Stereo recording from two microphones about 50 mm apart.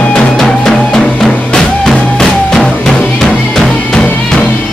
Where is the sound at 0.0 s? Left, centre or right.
Left.